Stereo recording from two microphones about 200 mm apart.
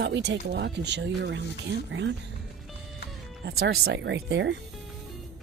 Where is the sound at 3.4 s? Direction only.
55° right (ahead or behind).